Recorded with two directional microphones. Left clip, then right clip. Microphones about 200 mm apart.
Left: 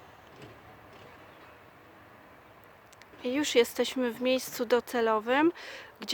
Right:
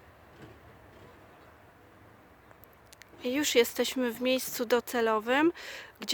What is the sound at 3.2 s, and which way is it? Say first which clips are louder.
Speech: even; 5° right (ahead or behind).